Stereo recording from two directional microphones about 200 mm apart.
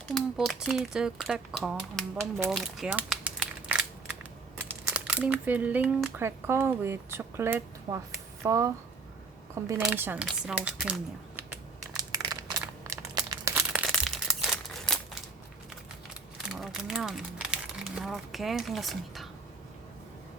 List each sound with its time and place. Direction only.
0.1 s speech: centre (ahead or behind)
11.9 s crumpling: 20° right (ahead or behind)
13.8 s crumpling: centre (ahead or behind)
16.5 s speech: centre (ahead or behind)